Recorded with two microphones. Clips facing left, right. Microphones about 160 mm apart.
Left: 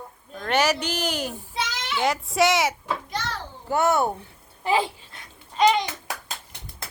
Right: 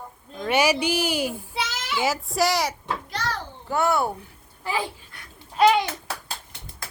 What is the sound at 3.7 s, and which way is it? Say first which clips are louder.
Speech: left 1 dB; 20° left (ahead or behind).